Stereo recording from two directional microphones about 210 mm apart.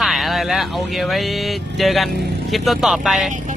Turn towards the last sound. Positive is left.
turn(degrees=0)  # may be behind; listen again after turning